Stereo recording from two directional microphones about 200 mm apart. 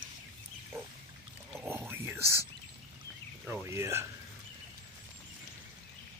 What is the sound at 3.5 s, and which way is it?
Speech, 15° right (ahead or behind).